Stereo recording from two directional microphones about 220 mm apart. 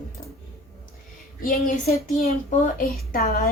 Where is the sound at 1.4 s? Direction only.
40° left (ahead or behind).